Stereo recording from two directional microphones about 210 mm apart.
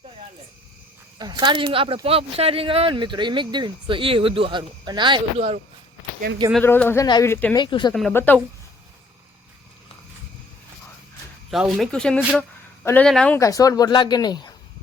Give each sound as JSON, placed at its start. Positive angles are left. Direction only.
{"t": 1.2, "sound": "speech", "side_deg": -20}
{"t": 6.5, "sound": "speech", "side_deg": 5}
{"t": 7.6, "sound": "speech", "side_deg": 20}
{"t": 7.9, "sound": "speech", "side_deg": 5}
{"t": 11.5, "sound": "speech", "side_deg": 0}